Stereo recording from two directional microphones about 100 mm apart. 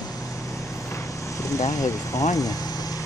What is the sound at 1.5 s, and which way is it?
Speech, 35° left (ahead or behind).